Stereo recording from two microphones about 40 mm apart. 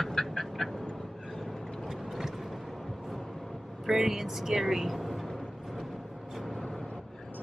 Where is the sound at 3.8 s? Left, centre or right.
Centre.